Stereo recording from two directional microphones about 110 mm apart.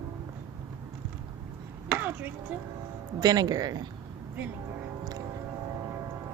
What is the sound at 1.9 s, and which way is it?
Chopping, 15° right (ahead or behind).